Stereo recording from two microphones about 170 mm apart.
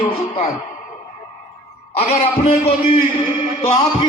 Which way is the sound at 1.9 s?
35° left (ahead or behind).